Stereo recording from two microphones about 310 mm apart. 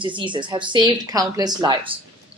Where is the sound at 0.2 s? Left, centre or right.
Centre.